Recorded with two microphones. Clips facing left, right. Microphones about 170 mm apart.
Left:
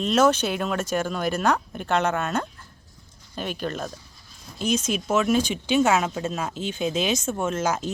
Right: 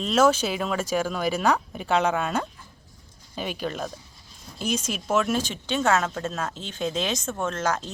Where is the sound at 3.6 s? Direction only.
5° right (ahead or behind).